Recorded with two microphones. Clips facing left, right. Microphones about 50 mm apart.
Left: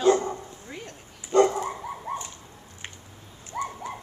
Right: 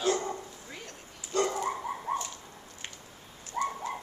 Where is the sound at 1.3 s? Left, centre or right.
Left.